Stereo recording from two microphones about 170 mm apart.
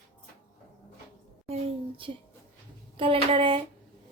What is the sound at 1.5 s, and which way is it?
A woman's voice, 30° right (ahead or behind).